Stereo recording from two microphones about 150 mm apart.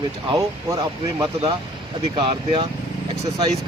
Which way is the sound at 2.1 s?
35° right (ahead or behind).